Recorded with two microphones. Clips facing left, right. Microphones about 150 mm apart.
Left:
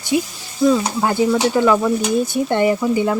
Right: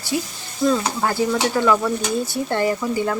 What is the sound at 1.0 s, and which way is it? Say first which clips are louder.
Stir: left 5 dB; 20° left (ahead or behind).